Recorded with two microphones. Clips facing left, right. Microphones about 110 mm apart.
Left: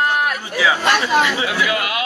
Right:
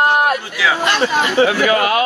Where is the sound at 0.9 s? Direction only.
45° right (ahead or behind).